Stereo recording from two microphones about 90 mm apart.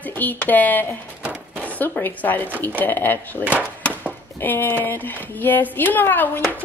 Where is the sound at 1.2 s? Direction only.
15° right (ahead or behind).